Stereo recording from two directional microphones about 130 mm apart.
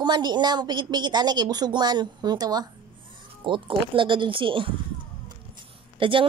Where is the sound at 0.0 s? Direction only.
35° right (ahead or behind).